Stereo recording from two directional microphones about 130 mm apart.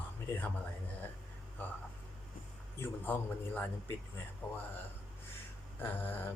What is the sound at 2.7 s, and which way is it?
A man's voice, 15° left (ahead or behind).